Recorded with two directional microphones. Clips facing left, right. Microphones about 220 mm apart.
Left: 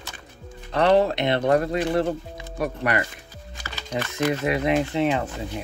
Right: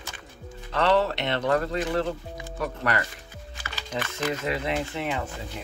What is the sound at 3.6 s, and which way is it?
Music, 35° left (ahead or behind).